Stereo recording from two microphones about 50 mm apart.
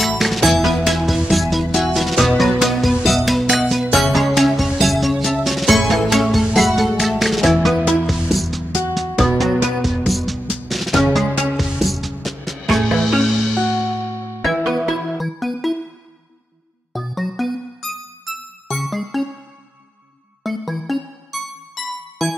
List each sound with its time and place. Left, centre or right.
0.0 s music: centre
14.4 s music: centre
16.9 s music: centre
20.4 s music: centre